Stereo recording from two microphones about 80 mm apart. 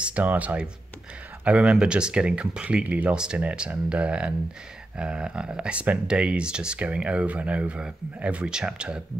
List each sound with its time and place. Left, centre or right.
0.0 s speech: centre